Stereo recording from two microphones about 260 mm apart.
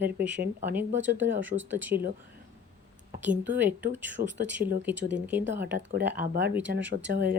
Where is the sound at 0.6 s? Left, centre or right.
Centre.